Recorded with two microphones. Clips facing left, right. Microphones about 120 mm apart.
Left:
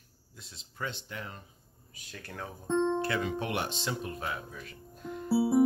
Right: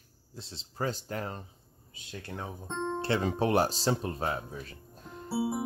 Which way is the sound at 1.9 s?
25° right (ahead or behind).